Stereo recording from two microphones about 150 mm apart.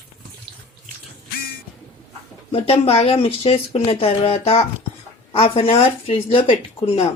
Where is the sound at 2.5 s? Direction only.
40° left (ahead or behind).